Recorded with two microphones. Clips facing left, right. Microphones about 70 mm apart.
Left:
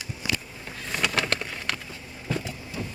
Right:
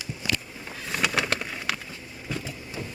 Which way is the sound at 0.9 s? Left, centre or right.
Centre.